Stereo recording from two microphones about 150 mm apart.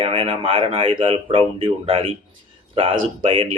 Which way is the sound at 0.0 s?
40° right (ahead or behind).